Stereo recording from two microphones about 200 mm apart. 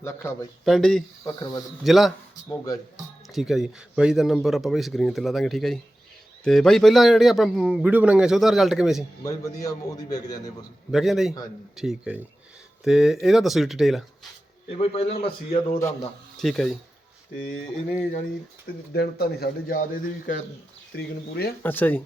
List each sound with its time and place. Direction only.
0.0 s speech: 15° left (ahead or behind)
0.6 s a man's voice: centre (ahead or behind)
1.2 s a man's voice: 20° left (ahead or behind)
1.8 s a man's voice: centre (ahead or behind)
2.3 s speech: 20° left (ahead or behind)
3.3 s a man's voice: centre (ahead or behind)
9.2 s a man's voice: 15° left (ahead or behind)
10.9 s a man's voice: centre (ahead or behind)
14.7 s a man's voice: 30° left (ahead or behind)
15.8 s speech: 15° left (ahead or behind)
16.4 s a man's voice: centre (ahead or behind)
18.9 s speech: 50° left (ahead or behind)
20.9 s speech: 55° left (ahead or behind)
21.6 s speech: 10° left (ahead or behind)